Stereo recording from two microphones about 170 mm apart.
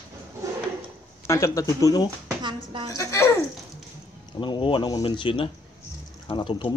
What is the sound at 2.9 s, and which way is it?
Speech, 20° left (ahead or behind).